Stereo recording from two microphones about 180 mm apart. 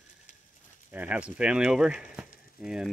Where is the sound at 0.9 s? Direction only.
10° right (ahead or behind).